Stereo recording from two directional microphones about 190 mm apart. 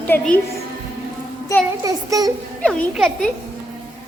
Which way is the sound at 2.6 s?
5° left (ahead or behind).